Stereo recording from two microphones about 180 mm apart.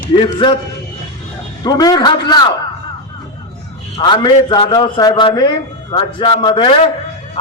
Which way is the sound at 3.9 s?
25° left (ahead or behind).